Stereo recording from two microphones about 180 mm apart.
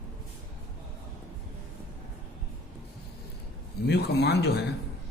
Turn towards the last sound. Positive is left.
turn(degrees=65)  # may be behind; listen again after turning